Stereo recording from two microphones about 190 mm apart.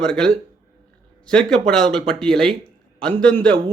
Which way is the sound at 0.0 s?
5° left (ahead or behind).